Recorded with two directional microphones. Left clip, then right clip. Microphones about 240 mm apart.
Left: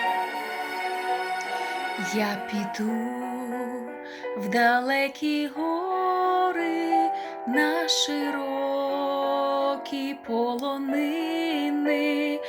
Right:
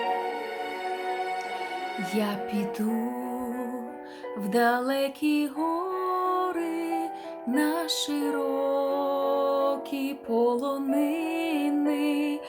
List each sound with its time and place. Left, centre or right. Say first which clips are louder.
2.1 s music: left 2 dB; centre
4.5 s music: left 2 dB; centre